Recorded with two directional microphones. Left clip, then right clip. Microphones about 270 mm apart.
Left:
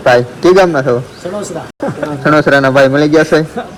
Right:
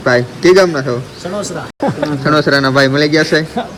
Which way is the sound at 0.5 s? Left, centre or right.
Left.